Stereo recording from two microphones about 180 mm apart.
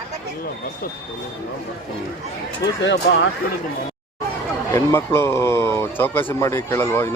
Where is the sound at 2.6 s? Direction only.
75° left (ahead or behind).